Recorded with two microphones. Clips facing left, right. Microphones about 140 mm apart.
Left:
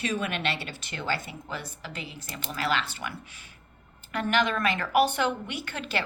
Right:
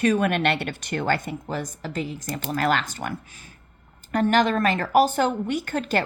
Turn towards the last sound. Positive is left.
turn(degrees=-45)  # may be behind; listen again after turning